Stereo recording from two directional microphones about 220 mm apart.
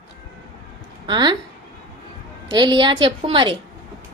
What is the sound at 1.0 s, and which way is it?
Speech, 20° right (ahead or behind).